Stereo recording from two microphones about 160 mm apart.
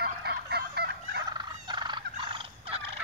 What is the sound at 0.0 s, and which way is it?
Fowl, 90° right.